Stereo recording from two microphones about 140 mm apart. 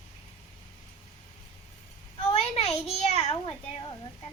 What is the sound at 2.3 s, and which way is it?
A child's voice, 50° left (ahead or behind).